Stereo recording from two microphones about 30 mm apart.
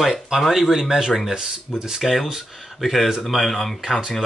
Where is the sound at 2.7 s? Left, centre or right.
Centre.